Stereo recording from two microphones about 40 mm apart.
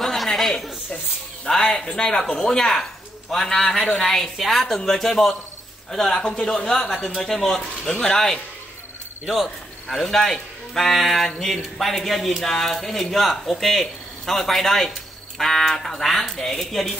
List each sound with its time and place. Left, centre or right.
0.0 s a sound: centre
1.4 s speech: centre
6.1 s speech: left
7.8 s speech: centre
9.8 s speech: centre